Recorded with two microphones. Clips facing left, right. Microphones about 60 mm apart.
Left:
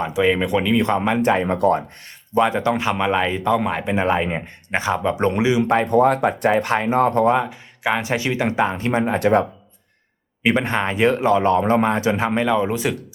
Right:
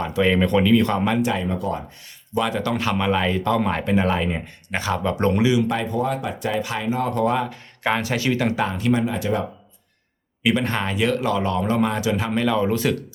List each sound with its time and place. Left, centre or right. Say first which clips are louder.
0.0 s speech: left 1 dB; centre
0.8 s speech: left 2 dB; left
1.2 s speech: left 5 dB; left
1.5 s speech: left 7 dB; left
2.3 s speech: left 5 dB; left; by 3.9 s centre
3.9 s speech: left 2 dB; left
5.9 s speech: left 8 dB; left
8.0 s speech: left 1 dB; left
9.1 s speech: left 7 dB; left
10.4 s speech: left 2 dB; left